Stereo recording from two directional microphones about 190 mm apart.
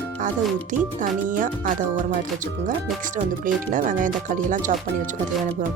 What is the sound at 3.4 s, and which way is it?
Speech, 45° right (ahead or behind).